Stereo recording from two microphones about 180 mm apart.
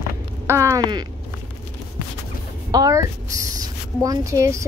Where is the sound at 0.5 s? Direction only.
15° right (ahead or behind).